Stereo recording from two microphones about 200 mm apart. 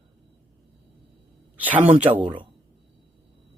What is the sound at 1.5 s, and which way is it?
Speech, 10° right (ahead or behind).